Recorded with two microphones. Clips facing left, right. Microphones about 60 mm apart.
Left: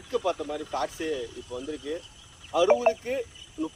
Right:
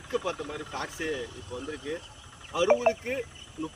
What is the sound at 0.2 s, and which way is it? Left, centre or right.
Speech, centre.